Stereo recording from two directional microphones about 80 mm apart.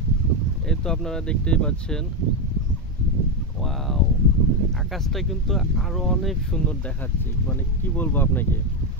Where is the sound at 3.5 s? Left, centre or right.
Centre.